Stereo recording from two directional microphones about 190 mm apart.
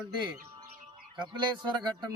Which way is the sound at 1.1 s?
25° right (ahead or behind).